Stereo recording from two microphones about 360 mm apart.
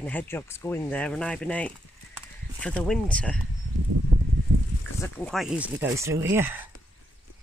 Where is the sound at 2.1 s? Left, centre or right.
Centre.